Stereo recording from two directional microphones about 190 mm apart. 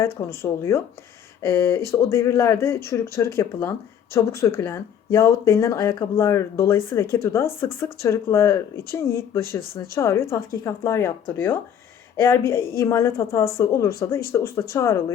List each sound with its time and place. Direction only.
0.0 s speech: 15° left (ahead or behind)